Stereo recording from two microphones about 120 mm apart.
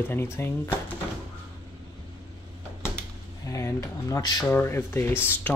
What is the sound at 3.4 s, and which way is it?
Speech, 25° left (ahead or behind).